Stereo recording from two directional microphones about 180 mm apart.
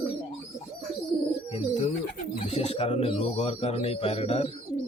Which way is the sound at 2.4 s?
35° left (ahead or behind).